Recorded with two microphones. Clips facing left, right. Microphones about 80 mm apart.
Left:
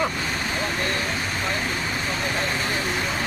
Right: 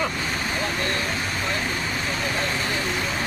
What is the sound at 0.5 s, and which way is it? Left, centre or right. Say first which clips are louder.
Vehicle: even; centre.